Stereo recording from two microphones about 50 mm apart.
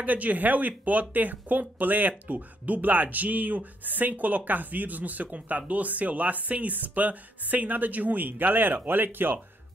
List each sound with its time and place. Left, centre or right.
0.0 s speech: right